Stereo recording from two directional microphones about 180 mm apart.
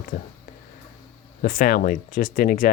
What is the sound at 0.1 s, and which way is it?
Speech, 65° left (ahead or behind).